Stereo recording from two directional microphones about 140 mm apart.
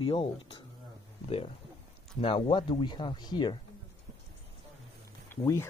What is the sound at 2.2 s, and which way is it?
Speech, 40° left (ahead or behind).